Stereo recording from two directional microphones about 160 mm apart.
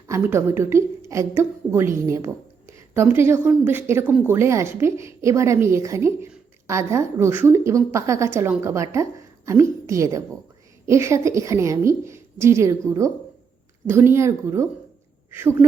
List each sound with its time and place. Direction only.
0.1 s a woman's voice: 15° right (ahead or behind)
13.8 s a woman's voice: 15° right (ahead or behind)